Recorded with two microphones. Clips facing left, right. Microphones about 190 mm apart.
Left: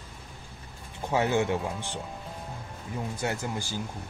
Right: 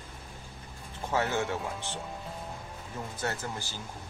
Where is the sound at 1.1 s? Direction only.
15° left (ahead or behind).